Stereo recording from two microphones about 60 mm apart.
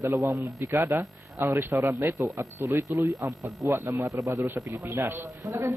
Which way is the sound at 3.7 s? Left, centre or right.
Right.